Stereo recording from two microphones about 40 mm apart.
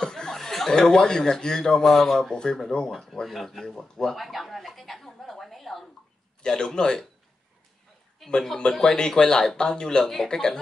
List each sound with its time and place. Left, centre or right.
0.0 s speech: centre
2.9 s speech: centre
4.2 s a sound: centre
6.4 s speech: centre
8.2 s speech: centre
8.7 s speech: centre